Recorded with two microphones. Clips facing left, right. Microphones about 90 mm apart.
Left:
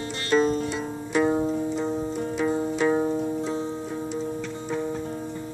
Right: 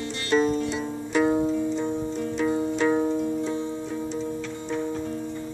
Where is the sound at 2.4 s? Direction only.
5° left (ahead or behind).